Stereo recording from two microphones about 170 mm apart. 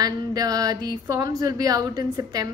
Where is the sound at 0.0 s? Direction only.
20° right (ahead or behind).